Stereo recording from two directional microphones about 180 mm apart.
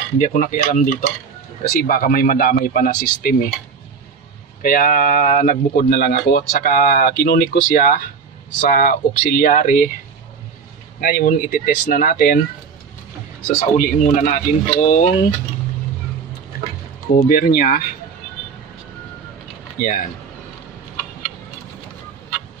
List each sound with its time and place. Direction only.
0.2 s speech: 45° left (ahead or behind)
1.6 s speech: 55° left (ahead or behind)
4.6 s speech: 50° left (ahead or behind)
11.0 s speech: 55° left (ahead or behind)
13.5 s speech: 45° left (ahead or behind)
17.1 s speech: 50° left (ahead or behind)
19.8 s speech: 50° left (ahead or behind)